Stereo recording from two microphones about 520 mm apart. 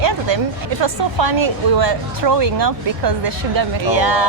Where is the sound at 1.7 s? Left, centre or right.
Right.